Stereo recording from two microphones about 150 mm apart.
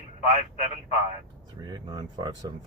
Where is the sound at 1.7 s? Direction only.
30° right (ahead or behind).